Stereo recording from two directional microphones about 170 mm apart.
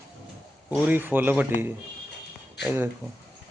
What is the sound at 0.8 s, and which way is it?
Speech, 10° right (ahead or behind).